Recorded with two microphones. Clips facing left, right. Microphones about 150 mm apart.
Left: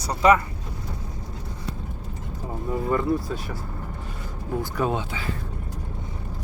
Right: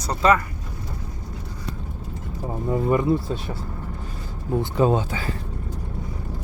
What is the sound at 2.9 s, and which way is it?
Speech, 20° right (ahead or behind).